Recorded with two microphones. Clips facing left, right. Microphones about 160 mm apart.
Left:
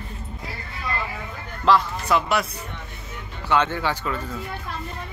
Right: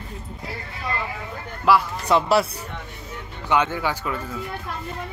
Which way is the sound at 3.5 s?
10° right (ahead or behind).